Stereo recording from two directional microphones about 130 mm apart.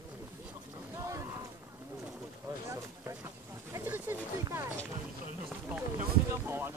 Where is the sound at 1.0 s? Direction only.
25° right (ahead or behind).